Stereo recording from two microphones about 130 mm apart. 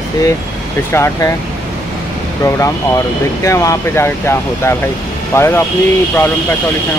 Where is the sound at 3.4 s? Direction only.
25° left (ahead or behind).